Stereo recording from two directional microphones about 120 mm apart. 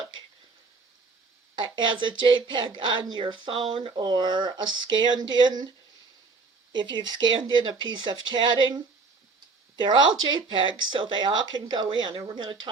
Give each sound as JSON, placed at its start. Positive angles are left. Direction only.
{"t": 1.5, "sound": "speech", "side_deg": -40}
{"t": 6.7, "sound": "speech", "side_deg": -40}